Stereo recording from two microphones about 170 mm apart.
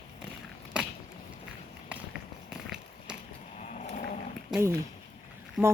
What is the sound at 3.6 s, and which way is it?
Sheep, 45° left (ahead or behind).